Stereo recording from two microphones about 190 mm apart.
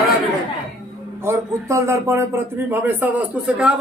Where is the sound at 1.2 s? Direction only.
15° right (ahead or behind).